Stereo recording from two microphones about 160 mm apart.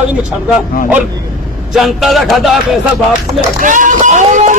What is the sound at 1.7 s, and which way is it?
A man's voice, centre (ahead or behind).